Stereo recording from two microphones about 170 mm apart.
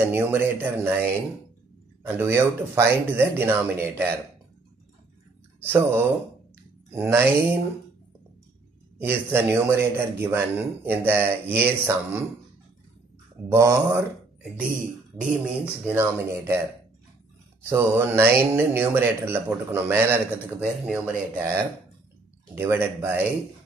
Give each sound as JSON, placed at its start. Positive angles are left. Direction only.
{"t": 0.0, "sound": "speech", "side_deg": -10}
{"t": 5.7, "sound": "speech", "side_deg": -15}
{"t": 8.9, "sound": "speech", "side_deg": -15}
{"t": 13.5, "sound": "speech", "side_deg": -15}
{"t": 15.1, "sound": "speech", "side_deg": -10}
{"t": 17.6, "sound": "speech", "side_deg": -15}
{"t": 22.6, "sound": "speech", "side_deg": -15}